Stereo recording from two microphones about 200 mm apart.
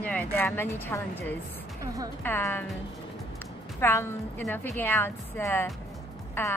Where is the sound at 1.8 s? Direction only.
15° right (ahead or behind).